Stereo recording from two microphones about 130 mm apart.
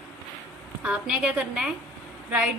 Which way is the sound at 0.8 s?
10° right (ahead or behind).